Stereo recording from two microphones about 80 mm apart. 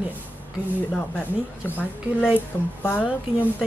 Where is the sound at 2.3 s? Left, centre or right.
Left.